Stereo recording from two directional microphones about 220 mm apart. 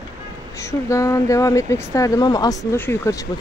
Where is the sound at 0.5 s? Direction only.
15° left (ahead or behind).